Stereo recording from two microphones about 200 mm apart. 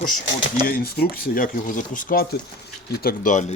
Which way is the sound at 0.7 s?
50° left (ahead or behind).